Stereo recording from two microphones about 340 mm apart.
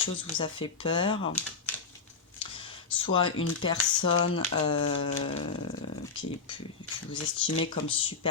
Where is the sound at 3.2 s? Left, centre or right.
Left.